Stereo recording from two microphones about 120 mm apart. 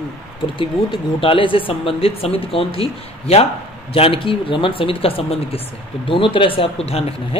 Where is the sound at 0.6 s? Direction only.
45° left (ahead or behind).